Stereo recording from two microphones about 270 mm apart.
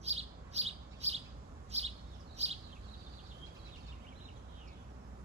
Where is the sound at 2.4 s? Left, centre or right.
Right.